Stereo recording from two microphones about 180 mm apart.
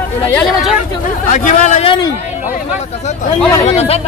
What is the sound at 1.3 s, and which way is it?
Speech, 45° left (ahead or behind).